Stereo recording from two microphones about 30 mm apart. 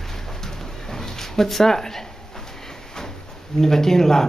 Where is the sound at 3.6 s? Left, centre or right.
Centre.